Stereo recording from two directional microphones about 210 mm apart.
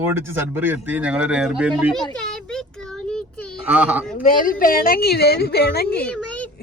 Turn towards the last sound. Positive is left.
turn(degrees=5)  # may be behind; listen again after turning